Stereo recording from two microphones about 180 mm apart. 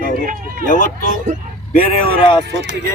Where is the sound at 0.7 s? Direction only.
45° left (ahead or behind).